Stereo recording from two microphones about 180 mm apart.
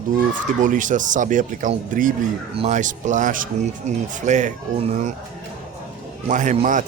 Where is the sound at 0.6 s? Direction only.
45° right (ahead or behind).